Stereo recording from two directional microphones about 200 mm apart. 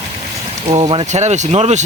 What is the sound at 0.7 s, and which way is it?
Speech, 25° right (ahead or behind).